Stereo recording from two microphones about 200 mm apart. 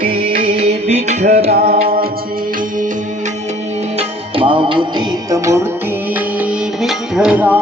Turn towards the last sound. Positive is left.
turn(degrees=-5)  # may be behind; listen again after turning